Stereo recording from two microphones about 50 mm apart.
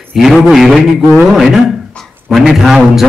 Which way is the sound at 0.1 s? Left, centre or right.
Centre.